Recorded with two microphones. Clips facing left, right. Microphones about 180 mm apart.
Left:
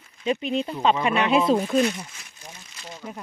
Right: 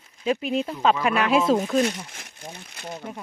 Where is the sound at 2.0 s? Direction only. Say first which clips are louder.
Right 5 dB; 60° right (ahead or behind).